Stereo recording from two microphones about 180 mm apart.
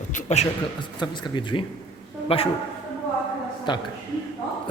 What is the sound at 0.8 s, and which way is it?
A man's voice, 25° left (ahead or behind).